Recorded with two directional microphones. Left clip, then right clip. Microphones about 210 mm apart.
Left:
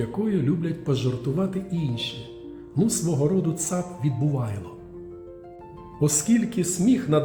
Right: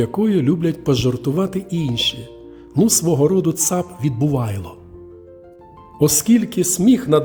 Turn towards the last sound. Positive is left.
turn(degrees=-50)  # may be behind; listen again after turning